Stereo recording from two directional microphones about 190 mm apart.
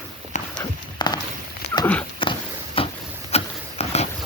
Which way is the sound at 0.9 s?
20° left (ahead or behind).